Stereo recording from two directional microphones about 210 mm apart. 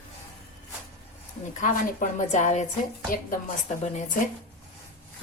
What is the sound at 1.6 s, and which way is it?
Speech, 40° left (ahead or behind).